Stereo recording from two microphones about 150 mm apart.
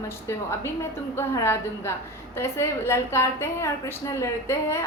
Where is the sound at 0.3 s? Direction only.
15° left (ahead or behind).